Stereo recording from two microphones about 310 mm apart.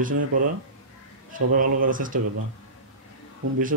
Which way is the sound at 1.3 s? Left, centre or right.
Right.